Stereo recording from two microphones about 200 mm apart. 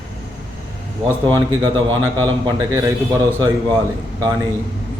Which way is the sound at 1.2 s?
25° right (ahead or behind).